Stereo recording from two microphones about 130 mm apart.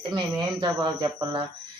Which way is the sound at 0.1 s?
30° right (ahead or behind).